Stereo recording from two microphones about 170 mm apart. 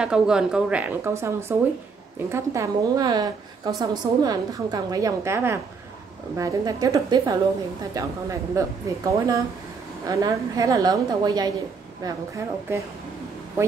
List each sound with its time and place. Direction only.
0.0 s a woman's voice: 5° right (ahead or behind)